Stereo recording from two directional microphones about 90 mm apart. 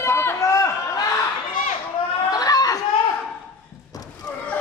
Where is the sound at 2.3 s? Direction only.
45° left (ahead or behind).